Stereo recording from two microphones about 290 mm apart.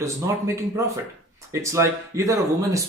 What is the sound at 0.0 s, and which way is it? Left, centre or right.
Speech, centre.